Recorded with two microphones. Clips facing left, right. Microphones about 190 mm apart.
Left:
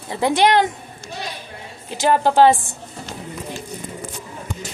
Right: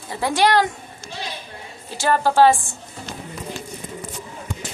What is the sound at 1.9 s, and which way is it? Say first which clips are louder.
Speech: left 2 dB; 20° left (ahead or behind).